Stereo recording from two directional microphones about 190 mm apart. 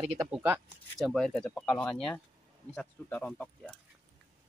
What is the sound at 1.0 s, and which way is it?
Speech, centre (ahead or behind).